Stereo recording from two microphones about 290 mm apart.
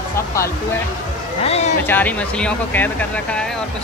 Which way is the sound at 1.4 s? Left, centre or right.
Left.